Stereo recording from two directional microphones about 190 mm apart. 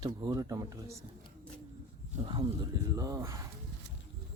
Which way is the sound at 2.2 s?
25° right (ahead or behind).